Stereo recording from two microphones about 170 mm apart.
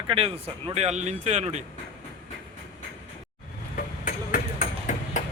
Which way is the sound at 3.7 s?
55° left (ahead or behind).